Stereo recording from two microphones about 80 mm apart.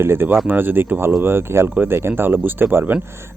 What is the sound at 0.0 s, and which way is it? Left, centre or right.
Speech, right.